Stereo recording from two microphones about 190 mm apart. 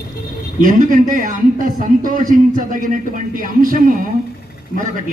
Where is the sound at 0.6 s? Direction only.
45° right (ahead or behind).